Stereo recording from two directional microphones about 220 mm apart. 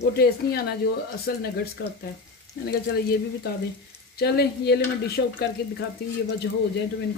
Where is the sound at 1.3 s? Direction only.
45° left (ahead or behind).